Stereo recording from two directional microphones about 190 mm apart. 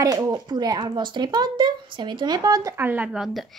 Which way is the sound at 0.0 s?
15° right (ahead or behind).